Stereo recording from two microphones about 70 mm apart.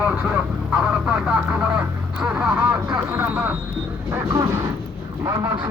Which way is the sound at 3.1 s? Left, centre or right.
Right.